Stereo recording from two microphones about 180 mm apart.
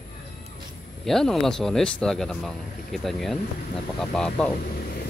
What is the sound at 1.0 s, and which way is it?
Speech, centre (ahead or behind).